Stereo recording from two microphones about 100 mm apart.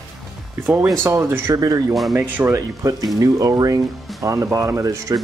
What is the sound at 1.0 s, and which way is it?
Speech, 30° right (ahead or behind).